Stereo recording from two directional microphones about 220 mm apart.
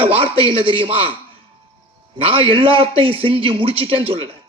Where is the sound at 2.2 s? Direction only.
25° right (ahead or behind).